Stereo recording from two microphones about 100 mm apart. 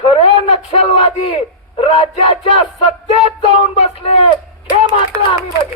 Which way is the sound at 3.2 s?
90° left.